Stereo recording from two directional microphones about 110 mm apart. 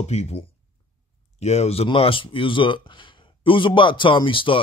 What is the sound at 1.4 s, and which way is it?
Speech, 80° left.